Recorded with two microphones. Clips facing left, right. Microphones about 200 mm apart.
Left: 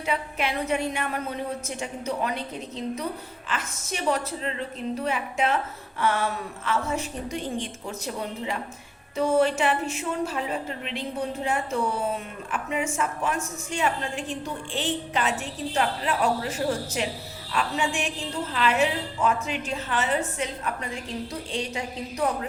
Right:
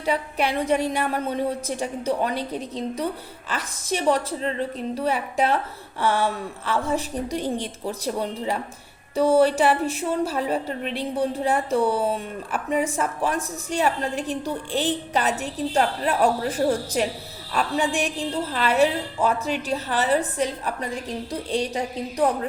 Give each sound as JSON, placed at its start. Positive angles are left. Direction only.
{"t": 0.0, "sound": "a woman's voice", "side_deg": -35}
{"t": 3.5, "sound": "a woman's voice", "side_deg": -35}